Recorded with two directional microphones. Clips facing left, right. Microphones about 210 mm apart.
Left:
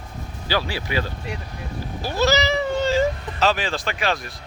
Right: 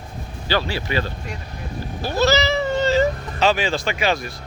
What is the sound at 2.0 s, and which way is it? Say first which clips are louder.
Cat: right 2 dB; 10° left (ahead or behind).